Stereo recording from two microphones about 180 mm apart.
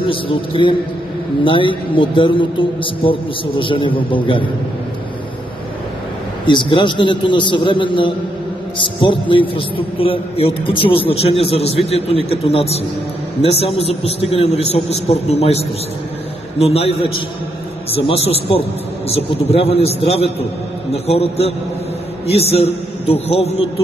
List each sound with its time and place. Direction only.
0.0 s a man's voice: 30° left (ahead or behind)
6.4 s a man's voice: 25° left (ahead or behind)